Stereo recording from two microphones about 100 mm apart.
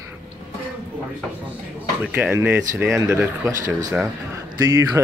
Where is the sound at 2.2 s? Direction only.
25° right (ahead or behind).